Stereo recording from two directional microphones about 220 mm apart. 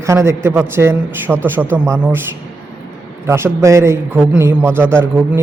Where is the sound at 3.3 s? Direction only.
10° right (ahead or behind).